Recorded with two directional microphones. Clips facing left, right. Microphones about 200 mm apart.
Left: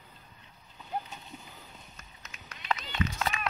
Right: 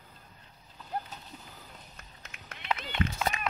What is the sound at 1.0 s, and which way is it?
Splash, centre (ahead or behind).